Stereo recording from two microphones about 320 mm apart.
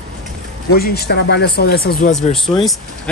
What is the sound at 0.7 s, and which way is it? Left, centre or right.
Speech, left.